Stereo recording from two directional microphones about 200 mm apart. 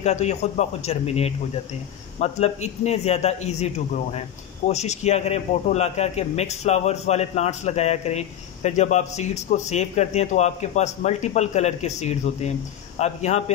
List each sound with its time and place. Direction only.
0.0 s a man's voice: 35° left (ahead or behind)